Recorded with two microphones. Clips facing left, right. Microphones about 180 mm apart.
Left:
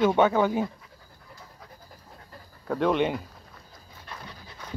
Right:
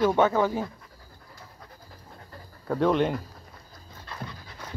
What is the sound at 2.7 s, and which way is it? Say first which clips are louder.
Speech: right 1 dB; centre (ahead or behind).